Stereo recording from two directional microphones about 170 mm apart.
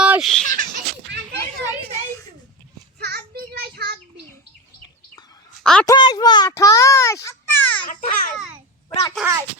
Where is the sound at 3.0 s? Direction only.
70° right (ahead or behind).